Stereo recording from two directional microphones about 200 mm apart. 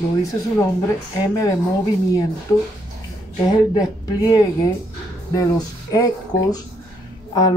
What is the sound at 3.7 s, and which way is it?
Speech, 20° left (ahead or behind).